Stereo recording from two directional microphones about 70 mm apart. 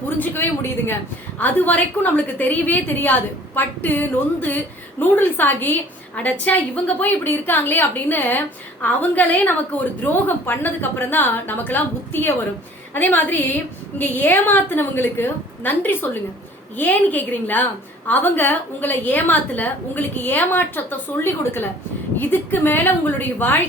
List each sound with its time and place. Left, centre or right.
0.2 s a woman's voice: left